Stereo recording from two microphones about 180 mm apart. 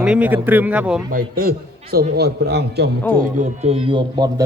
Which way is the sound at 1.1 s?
50° right (ahead or behind).